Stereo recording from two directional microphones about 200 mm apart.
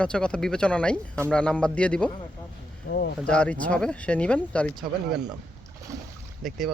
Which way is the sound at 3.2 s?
5° left (ahead or behind).